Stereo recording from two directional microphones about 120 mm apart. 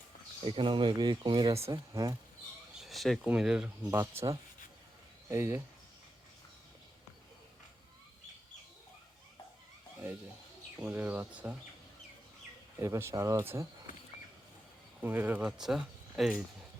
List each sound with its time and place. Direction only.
0.4 s speech: 45° right (ahead or behind)
1.5 s speech: 25° right (ahead or behind)
2.7 s a sound: centre (ahead or behind)
3.2 s speech: 5° right (ahead or behind)
3.9 s speech: 20° right (ahead or behind)
10.8 s speech: 15° right (ahead or behind)
12.8 s speech: 25° right (ahead or behind)
15.0 s speech: 15° right (ahead or behind)
15.5 s speech: 5° right (ahead or behind)